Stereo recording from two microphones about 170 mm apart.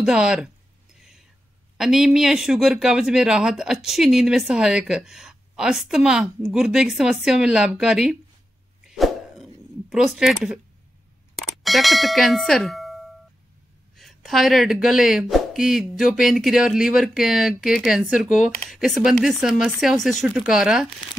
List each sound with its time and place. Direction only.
0.0 s speech: 5° right (ahead or behind)
0.9 s whispering: centre (ahead or behind)
1.8 s speech: 5° right (ahead or behind)
8.8 s a sound: centre (ahead or behind)
11.3 s speech: centre (ahead or behind)